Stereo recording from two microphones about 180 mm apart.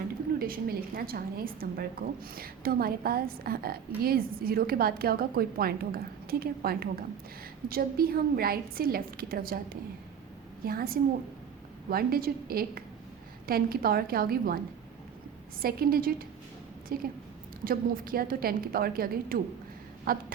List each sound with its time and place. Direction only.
0.3 s a woman's voice: 55° right (ahead or behind)
15.6 s a woman's voice: 55° right (ahead or behind)